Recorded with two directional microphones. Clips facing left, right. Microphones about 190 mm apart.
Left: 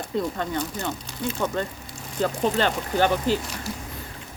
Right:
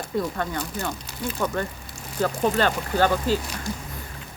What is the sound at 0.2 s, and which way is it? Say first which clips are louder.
Speech: left 1 dB; 20° left (ahead or behind).